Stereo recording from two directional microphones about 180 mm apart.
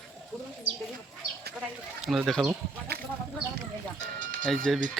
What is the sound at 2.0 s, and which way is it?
Speech, centre (ahead or behind).